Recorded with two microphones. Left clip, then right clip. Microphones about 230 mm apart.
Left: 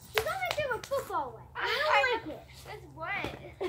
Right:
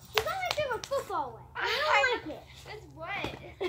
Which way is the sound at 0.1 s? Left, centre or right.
Centre.